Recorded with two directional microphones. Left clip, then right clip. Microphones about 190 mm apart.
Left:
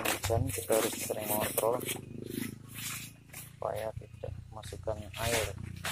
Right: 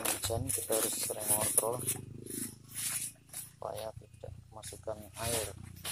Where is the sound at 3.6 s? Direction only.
Centre (ahead or behind).